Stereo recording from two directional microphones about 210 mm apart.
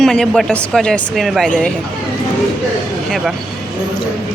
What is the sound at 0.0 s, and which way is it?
A woman's voice, centre (ahead or behind).